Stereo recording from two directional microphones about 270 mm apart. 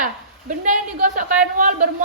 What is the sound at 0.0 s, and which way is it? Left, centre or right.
A woman's voice, right.